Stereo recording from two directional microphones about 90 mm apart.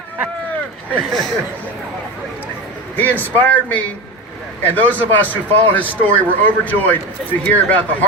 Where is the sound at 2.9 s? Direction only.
20° left (ahead or behind).